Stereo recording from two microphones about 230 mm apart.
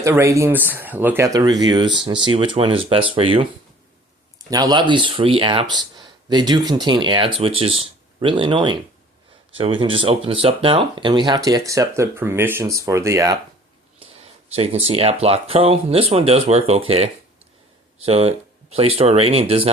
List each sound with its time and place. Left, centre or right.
0.0 s speech: centre
4.4 s speech: centre
14.0 s speech: right